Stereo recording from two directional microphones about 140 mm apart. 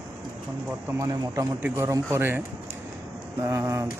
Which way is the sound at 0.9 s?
25° right (ahead or behind).